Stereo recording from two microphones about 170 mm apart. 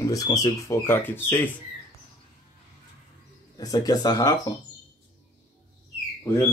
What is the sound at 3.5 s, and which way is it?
Speech, 20° left (ahead or behind).